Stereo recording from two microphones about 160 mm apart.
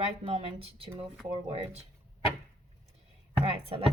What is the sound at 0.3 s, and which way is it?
Speech, 35° right (ahead or behind).